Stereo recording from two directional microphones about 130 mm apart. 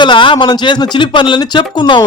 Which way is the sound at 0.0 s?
40° left (ahead or behind).